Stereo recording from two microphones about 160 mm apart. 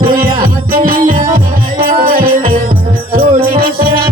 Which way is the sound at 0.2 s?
60° right (ahead or behind).